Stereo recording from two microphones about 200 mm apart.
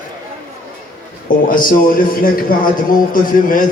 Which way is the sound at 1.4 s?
45° left (ahead or behind).